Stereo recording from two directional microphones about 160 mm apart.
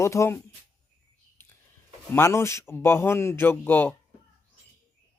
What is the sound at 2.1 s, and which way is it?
Speech, 15° left (ahead or behind).